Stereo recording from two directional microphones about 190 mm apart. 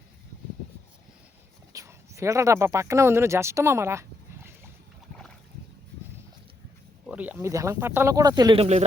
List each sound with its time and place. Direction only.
1.7 s speech: 15° right (ahead or behind)
7.1 s speech: 10° right (ahead or behind)